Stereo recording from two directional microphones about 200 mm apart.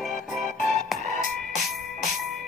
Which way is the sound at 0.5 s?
40° left (ahead or behind).